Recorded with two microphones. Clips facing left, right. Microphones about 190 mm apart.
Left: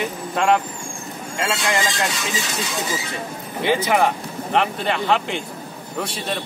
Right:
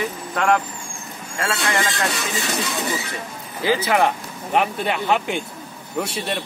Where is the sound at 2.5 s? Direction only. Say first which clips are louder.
Right 1 dB; 60° right (ahead or behind).